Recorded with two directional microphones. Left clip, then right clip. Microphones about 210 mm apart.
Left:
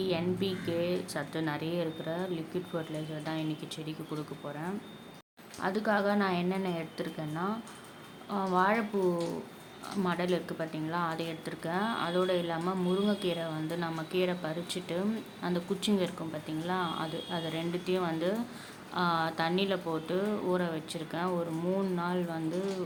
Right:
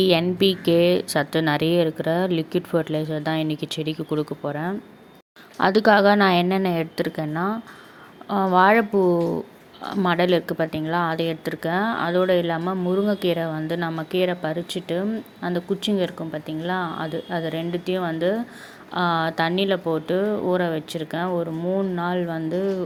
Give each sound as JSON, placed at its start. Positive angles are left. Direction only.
{"t": 0.0, "sound": "a woman's voice", "side_deg": -40}